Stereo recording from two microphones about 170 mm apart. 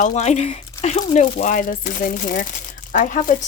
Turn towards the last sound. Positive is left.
turn(degrees=50)  # may be behind; listen again after turning